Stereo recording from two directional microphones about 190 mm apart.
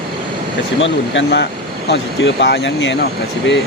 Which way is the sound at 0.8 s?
75° left (ahead or behind).